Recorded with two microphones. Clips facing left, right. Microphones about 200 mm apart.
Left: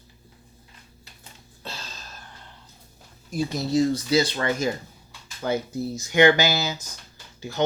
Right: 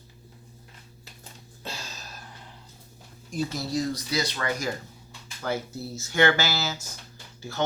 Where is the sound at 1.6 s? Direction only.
10° right (ahead or behind).